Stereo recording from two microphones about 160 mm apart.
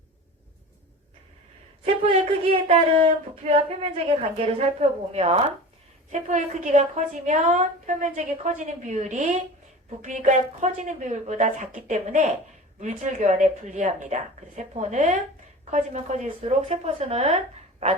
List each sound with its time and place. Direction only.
1.8 s a woman's voice: 35° right (ahead or behind)